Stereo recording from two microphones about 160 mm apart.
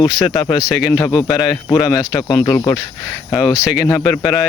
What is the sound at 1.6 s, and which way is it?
Speech, 20° left (ahead or behind).